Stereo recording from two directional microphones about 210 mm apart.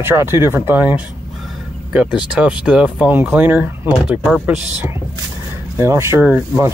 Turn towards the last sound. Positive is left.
turn(degrees=-10)  # may be behind; listen again after turning